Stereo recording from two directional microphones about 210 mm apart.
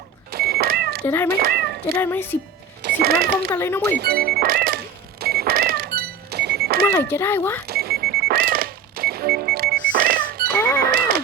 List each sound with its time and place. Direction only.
0.3 s cat: 50° right (ahead or behind)
1.0 s speech: 10° left (ahead or behind)
1.3 s speech: 45° right (ahead or behind)
2.0 s speech: 10° left (ahead or behind)
2.8 s speech: 45° right (ahead or behind)
3.5 s speech: 10° left (ahead or behind)
3.9 s speech: 50° right (ahead or behind)
5.2 s cash register: 50° right (ahead or behind)
6.9 s speech: 10° left (ahead or behind)
7.7 s alarm clock: 45° right (ahead or behind)